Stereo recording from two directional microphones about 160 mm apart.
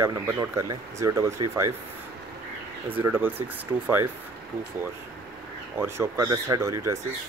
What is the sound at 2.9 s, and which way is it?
Speech, 10° right (ahead or behind).